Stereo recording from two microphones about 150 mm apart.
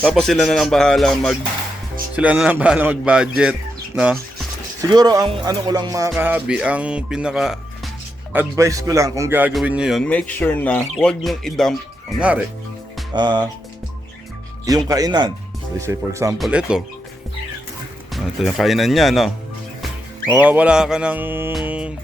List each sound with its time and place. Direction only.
0.0 s speech: 5° left (ahead or behind)
2.1 s speech: 10° right (ahead or behind)
4.8 s speech: 25° right (ahead or behind)
6.1 s speech: 10° right (ahead or behind)
8.3 s speech: 15° right (ahead or behind)
9.5 s speech: 5° right (ahead or behind)
10.0 s speech: 10° left (ahead or behind)
13.1 s speech: 30° right (ahead or behind)
14.6 s speech: 25° right (ahead or behind)
16.4 s speech: 5° right (ahead or behind)
18.1 s speech: centre (ahead or behind)
20.3 s speech: 10° right (ahead or behind)
21.6 s music: 10° right (ahead or behind)